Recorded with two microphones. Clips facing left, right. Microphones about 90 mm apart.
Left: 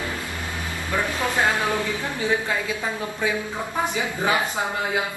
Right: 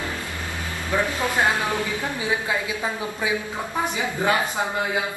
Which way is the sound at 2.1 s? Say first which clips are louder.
Left 2 dB; 15° right (ahead or behind).